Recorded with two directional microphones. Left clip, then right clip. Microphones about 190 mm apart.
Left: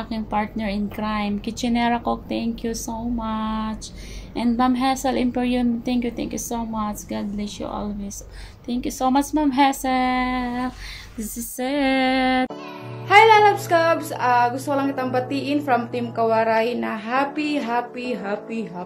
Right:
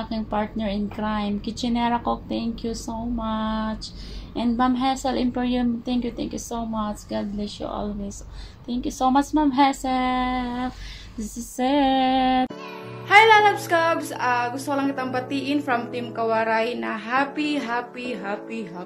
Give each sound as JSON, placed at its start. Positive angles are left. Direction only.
{"t": 0.1, "sound": "a woman's voice", "side_deg": 20}
{"t": 13.1, "sound": "speech", "side_deg": 0}